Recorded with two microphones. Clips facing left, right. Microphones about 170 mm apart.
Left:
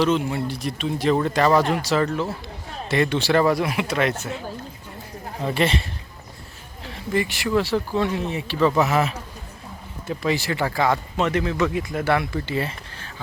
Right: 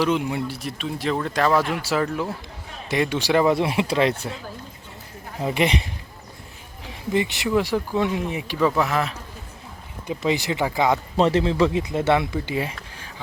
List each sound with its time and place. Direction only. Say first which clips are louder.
0.0 s speech: left 1 dB; 15° right (ahead or behind)
3.5 s speech: right 2 dB; 25° right (ahead or behind)
5.4 s speech: even; 15° right (ahead or behind)
6.8 s speech: right 1 dB; 15° right (ahead or behind)
8.7 s speech: left 2 dB; 5° left (ahead or behind)
10.1 s speech: right 1 dB; 20° right (ahead or behind)
11.2 s speech: right 5 dB; 30° right (ahead or behind); by 13.1 s 10° right (ahead or behind)